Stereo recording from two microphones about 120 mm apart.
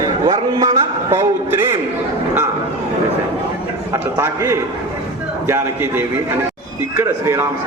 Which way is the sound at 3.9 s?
20° right (ahead or behind).